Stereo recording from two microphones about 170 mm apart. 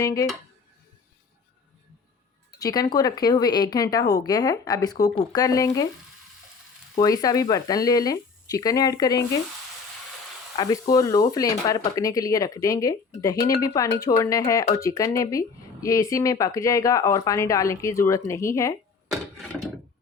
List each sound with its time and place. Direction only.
0.0 s speech: 20° left (ahead or behind)
2.6 s speech: 20° left (ahead or behind)
7.0 s speech: 20° left (ahead or behind)
10.6 s speech: 20° left (ahead or behind)
13.3 s speech: 60° left (ahead or behind)
13.6 s speech: 20° left (ahead or behind)